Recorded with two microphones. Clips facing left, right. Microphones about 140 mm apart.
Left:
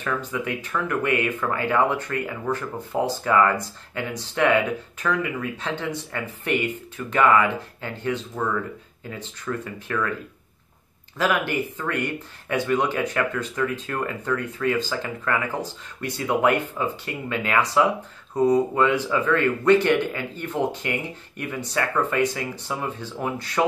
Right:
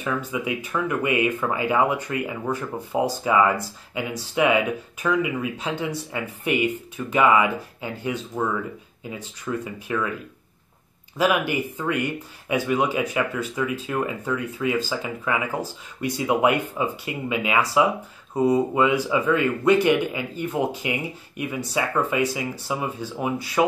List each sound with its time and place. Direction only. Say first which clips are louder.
0.1 s speech: right 1 dB; 10° right (ahead or behind)
11.1 s speech: right 2 dB; 15° right (ahead or behind)